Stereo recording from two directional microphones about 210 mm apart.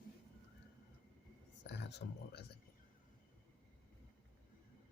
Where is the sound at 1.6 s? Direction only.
55° left (ahead or behind).